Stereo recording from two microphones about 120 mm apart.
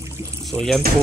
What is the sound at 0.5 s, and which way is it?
Speech, 20° right (ahead or behind).